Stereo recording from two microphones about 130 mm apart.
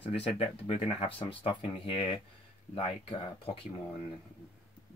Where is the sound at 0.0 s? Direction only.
45° left (ahead or behind).